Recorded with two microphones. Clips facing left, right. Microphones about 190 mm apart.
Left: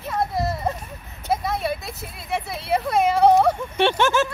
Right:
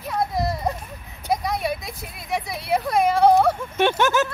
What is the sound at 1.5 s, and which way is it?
Speech, 15° right (ahead or behind).